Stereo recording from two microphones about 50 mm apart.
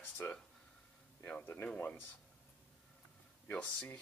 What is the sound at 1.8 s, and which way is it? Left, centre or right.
Speech, left.